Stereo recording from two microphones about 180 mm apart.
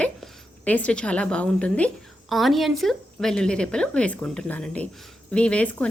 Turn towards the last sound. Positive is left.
turn(degrees=5)  # may be behind; listen again after turning